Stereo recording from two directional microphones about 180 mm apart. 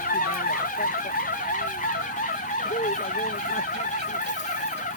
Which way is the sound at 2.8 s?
45° left (ahead or behind).